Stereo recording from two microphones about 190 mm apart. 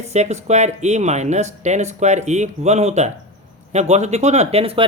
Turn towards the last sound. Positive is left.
turn(degrees=-30)  # may be behind; listen again after turning